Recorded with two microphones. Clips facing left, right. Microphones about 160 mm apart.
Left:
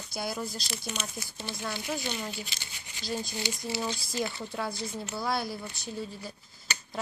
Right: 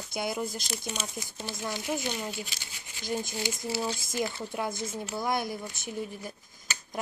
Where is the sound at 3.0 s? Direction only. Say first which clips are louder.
Right 2 dB; 20° right (ahead or behind).